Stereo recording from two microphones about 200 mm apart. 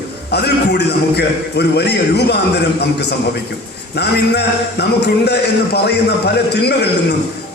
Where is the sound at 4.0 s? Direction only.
55° left (ahead or behind).